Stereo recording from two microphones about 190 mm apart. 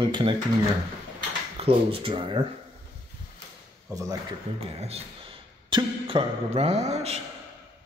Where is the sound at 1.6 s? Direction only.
30° right (ahead or behind).